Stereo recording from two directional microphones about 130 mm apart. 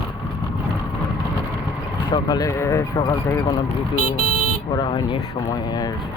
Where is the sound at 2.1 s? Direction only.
30° left (ahead or behind).